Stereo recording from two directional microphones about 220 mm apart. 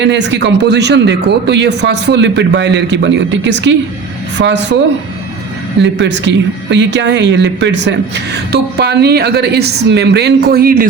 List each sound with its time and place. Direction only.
0.0 s speech: 55° right (ahead or behind)
5.8 s speech: 55° right (ahead or behind)